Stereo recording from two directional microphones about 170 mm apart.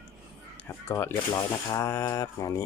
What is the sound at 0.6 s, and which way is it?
Speech, 15° left (ahead or behind).